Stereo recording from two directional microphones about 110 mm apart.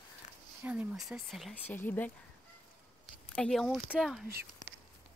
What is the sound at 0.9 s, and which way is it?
Speech, centre (ahead or behind).